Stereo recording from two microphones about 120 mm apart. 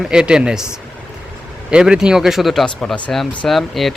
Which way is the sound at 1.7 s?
5° right (ahead or behind).